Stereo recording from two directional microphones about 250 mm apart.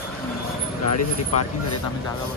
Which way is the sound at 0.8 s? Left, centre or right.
Left.